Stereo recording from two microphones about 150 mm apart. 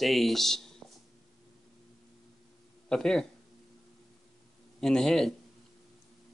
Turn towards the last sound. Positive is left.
turn(degrees=0)  # may be behind; listen again after turning